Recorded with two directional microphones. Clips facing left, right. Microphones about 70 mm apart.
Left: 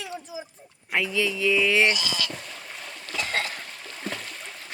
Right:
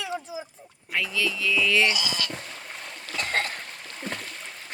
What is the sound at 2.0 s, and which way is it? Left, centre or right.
Speech, right.